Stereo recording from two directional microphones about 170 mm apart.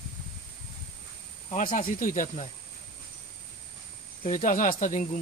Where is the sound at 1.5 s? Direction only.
50° left (ahead or behind).